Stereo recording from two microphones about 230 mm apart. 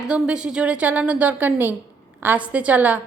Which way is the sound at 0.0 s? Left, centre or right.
Centre.